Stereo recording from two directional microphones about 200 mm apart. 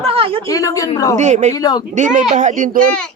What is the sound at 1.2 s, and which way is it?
Speech, 35° right (ahead or behind).